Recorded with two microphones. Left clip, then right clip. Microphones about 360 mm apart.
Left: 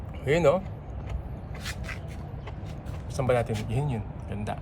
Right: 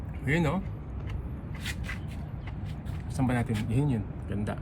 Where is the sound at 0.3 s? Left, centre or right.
Centre.